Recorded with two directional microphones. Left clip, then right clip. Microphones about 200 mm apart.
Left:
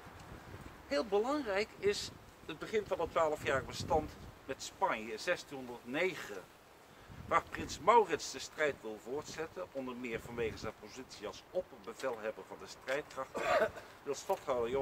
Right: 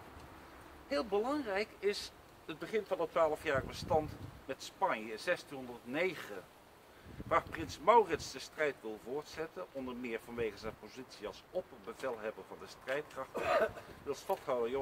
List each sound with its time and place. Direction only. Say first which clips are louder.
0.8 s speech: left 1 dB; centre (ahead or behind)
13.3 s speech: even; 15° left (ahead or behind)
14.0 s speech: left 1 dB; centre (ahead or behind)